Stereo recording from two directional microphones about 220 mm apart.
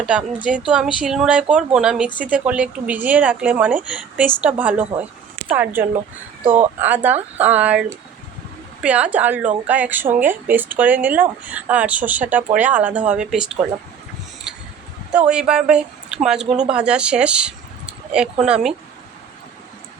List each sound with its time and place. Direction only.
0.0 s speech: 5° right (ahead or behind)
15.1 s a woman's voice: 5° right (ahead or behind)
16.5 s speech: 25° right (ahead or behind)
16.7 s speech: 5° right (ahead or behind)